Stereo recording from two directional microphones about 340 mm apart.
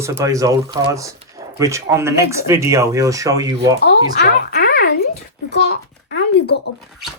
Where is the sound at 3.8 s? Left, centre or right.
Left.